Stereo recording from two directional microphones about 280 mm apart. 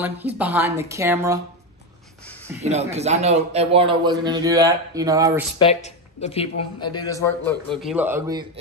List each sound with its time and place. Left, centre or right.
0.4 s a man's voice: centre
2.6 s a man's voice: right
5.6 s a man's voice: left; by 8.5 s centre